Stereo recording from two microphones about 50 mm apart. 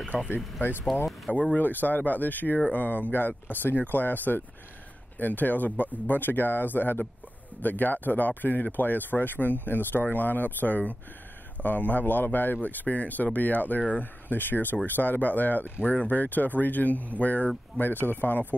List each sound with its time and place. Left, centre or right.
0.3 s speech: left
1.3 s speech: left
17.7 s speech: left